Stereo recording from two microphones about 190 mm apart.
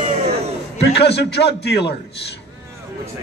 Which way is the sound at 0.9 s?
65° left (ahead or behind).